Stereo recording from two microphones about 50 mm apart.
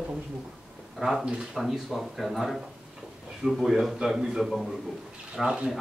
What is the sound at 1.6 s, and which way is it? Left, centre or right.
A man's voice, centre.